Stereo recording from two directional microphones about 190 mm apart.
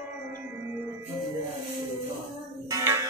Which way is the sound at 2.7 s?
20° right (ahead or behind).